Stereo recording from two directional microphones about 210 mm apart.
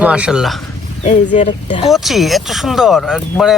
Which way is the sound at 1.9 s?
Centre (ahead or behind).